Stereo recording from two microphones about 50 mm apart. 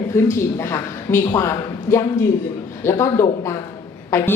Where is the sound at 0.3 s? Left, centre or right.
Left.